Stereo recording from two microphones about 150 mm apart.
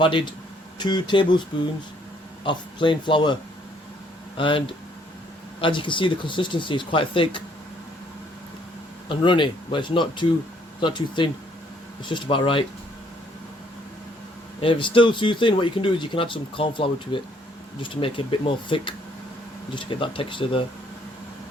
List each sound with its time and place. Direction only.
0.0 s speech: 35° left (ahead or behind)
2.4 s speech: 30° left (ahead or behind)
4.4 s speech: 35° left (ahead or behind)
9.0 s speech: 35° left (ahead or behind)
14.6 s speech: 35° left (ahead or behind)